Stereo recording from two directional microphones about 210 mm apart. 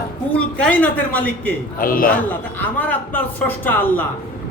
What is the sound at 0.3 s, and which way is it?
A man's voice, 5° left (ahead or behind).